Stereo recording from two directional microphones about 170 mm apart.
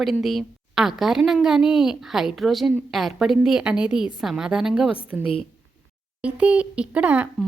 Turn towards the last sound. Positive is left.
turn(degrees=-10)  # may be behind; listen again after turning